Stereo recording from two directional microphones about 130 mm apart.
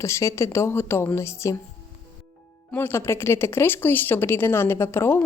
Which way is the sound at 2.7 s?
15° left (ahead or behind).